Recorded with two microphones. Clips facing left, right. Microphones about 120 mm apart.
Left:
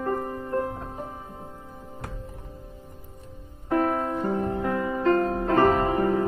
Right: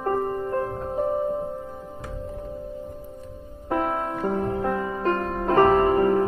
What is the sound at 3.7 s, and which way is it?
Music, 25° right (ahead or behind).